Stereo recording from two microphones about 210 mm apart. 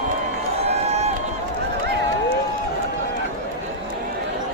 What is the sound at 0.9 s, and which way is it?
Run, 30° right (ahead or behind).